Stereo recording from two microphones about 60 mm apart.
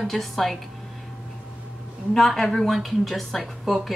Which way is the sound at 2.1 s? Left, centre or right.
Centre.